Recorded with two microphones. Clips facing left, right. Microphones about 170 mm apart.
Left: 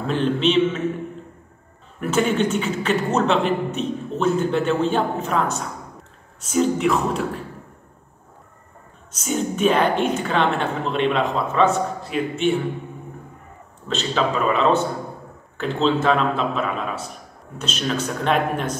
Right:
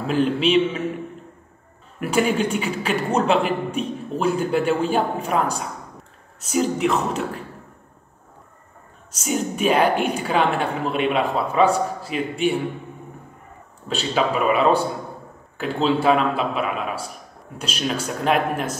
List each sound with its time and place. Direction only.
0.0 s a man's voice: 5° right (ahead or behind)
2.0 s a man's voice: 10° right (ahead or behind)
6.5 s a man's voice: 5° right (ahead or behind)
9.2 s a man's voice: 5° right (ahead or behind)
13.8 s a man's voice: 10° right (ahead or behind)